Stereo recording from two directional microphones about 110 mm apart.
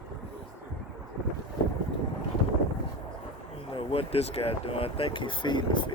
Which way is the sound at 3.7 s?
60° left (ahead or behind).